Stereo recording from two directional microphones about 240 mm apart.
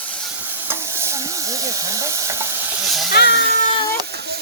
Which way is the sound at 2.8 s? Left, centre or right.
Centre.